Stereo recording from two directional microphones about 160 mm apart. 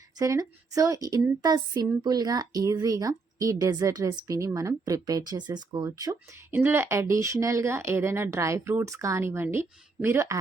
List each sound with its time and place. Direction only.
0.2 s speech: 20° right (ahead or behind)